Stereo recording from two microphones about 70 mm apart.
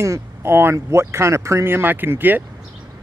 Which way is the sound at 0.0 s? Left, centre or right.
Right.